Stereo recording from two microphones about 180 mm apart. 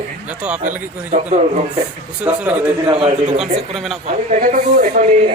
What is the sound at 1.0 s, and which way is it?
Speech, 40° right (ahead or behind).